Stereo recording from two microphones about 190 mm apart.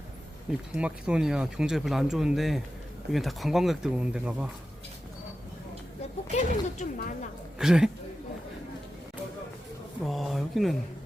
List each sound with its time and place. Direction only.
0.7 s speech: 5° right (ahead or behind)
6.3 s speech: 40° left (ahead or behind)
7.6 s speech: 5° right (ahead or behind)
10.0 s speech: centre (ahead or behind)